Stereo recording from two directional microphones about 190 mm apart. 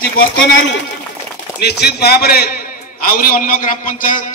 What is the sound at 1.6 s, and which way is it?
A man's voice, 60° left (ahead or behind).